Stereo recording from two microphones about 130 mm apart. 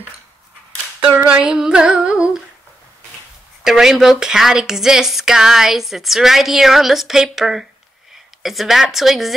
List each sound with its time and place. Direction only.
1.0 s humming: 10° right (ahead or behind)
3.6 s speech: 5° right (ahead or behind)